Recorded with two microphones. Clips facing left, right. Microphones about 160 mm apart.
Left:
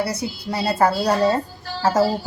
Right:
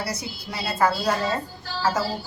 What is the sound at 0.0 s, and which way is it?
A woman's voice, 30° left (ahead or behind).